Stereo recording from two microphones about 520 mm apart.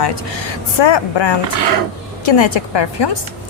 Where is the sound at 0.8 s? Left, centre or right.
Left.